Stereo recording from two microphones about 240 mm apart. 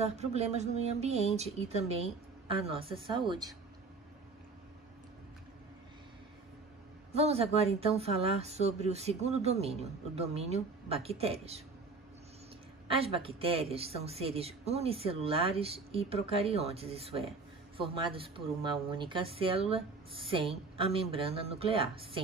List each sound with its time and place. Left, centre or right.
0.0 s speech: right
7.1 s speech: right
12.9 s speech: right